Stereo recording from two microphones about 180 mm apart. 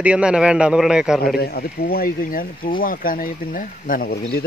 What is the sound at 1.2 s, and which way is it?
Speech, 55° left (ahead or behind).